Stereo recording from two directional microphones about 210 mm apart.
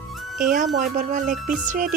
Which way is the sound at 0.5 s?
40° right (ahead or behind).